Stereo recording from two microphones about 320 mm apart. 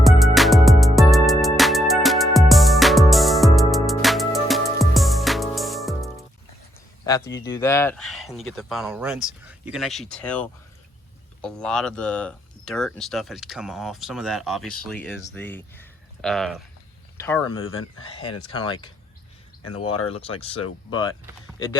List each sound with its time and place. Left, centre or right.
0.0 s music: centre
7.3 s speech: centre
17.7 s speech: left
18.1 s speech: centre
20.1 s speech: centre